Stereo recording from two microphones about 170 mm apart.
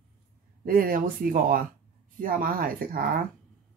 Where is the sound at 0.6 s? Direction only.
55° right (ahead or behind).